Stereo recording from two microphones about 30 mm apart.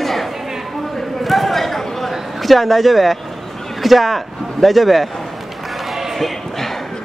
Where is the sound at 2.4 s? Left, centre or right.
Centre.